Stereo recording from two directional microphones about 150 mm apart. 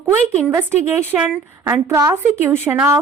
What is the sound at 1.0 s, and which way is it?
A woman's voice, 15° right (ahead or behind).